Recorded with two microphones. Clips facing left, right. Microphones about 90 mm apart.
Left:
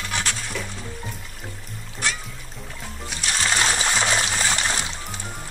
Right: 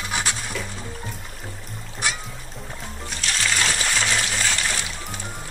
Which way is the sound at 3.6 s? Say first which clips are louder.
Left 2 dB; 20° left (ahead or behind).